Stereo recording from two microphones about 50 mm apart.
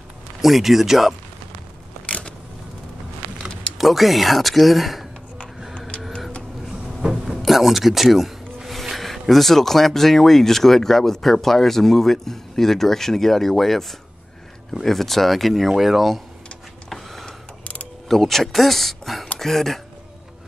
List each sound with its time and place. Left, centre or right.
0.4 s speech: centre
2.0 s a sound: left
3.7 s speech: centre
5.8 s vehicle: left
7.0 s speech: centre
16.9 s a sound: centre
18.0 s speech: centre